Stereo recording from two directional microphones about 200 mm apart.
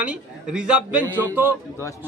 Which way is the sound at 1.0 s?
10° left (ahead or behind).